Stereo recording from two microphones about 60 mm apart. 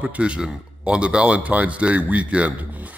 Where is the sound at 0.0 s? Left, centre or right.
Centre.